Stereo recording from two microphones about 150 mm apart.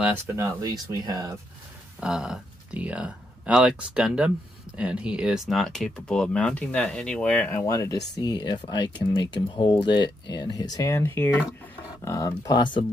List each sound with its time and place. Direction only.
0.3 s speech: 20° right (ahead or behind)
2.0 s speech: 5° right (ahead or behind)
7.5 s speech: 20° left (ahead or behind)